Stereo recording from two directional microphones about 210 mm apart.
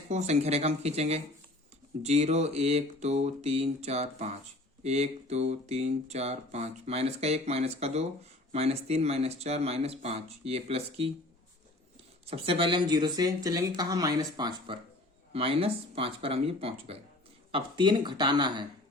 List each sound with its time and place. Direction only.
0.1 s speech: 30° right (ahead or behind)
12.2 s speech: 25° right (ahead or behind)